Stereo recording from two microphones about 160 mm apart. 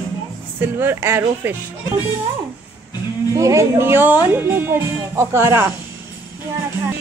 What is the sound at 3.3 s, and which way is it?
Speech, 20° right (ahead or behind).